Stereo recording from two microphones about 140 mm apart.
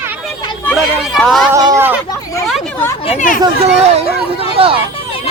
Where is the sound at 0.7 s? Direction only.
Centre (ahead or behind).